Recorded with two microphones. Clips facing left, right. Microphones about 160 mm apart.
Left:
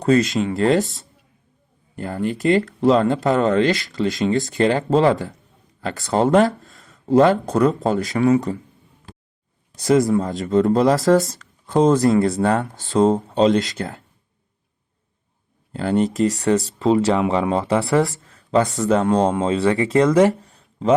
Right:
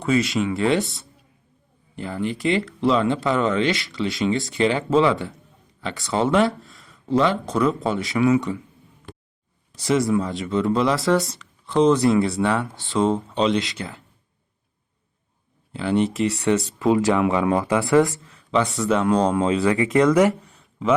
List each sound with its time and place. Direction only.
0.0 s speech: 40° left (ahead or behind)
9.8 s speech: 45° left (ahead or behind)
15.7 s speech: 45° left (ahead or behind)
16.8 s speech: 25° left (ahead or behind)